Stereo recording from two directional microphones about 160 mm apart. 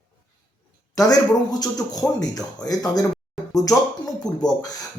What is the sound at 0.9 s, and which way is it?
Speech, 25° left (ahead or behind).